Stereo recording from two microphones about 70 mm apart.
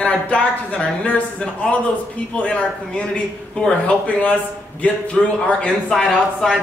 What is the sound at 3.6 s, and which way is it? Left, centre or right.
Speech, left.